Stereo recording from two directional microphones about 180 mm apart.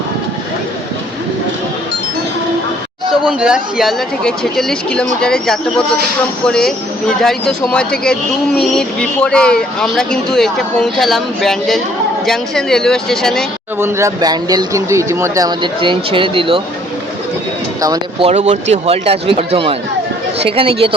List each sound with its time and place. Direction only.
3.1 s speech: 5° right (ahead or behind)
13.7 s speech: 15° right (ahead or behind)
17.7 s speech: 20° right (ahead or behind)
18.2 s speech: 40° right (ahead or behind)